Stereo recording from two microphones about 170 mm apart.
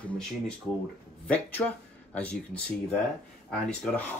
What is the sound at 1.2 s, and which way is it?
Speech, 5° left (ahead or behind).